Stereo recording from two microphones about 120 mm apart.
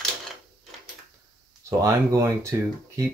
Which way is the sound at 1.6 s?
25° right (ahead or behind).